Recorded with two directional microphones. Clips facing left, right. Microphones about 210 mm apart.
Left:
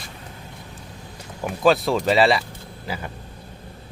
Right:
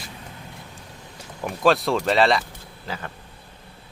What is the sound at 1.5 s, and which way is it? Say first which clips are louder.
Speech: left 1 dB; centre (ahead or behind).